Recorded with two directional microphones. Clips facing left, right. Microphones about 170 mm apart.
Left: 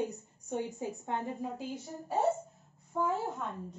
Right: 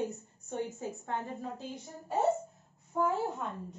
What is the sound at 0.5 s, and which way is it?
A woman's voice, 15° left (ahead or behind).